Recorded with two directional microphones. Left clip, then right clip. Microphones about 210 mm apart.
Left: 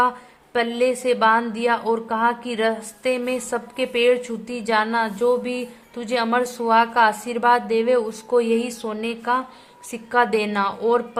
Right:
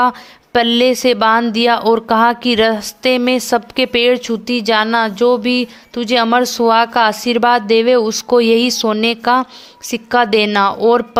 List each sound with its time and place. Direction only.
0.5 s a woman's voice: 35° right (ahead or behind)